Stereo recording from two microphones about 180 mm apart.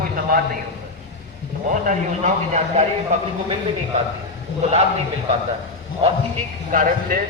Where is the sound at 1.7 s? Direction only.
45° right (ahead or behind).